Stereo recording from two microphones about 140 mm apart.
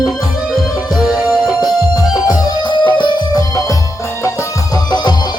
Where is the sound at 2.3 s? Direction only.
35° left (ahead or behind).